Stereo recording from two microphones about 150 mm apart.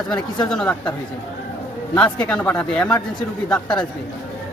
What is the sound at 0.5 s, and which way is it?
Speech, 5° left (ahead or behind).